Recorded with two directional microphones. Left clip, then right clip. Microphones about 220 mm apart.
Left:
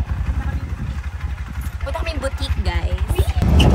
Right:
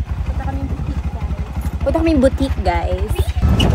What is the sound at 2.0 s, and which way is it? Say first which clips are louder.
Speech: right 14 dB; 15° left (ahead or behind).